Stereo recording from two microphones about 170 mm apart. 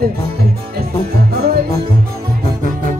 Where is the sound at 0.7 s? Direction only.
65° right (ahead or behind).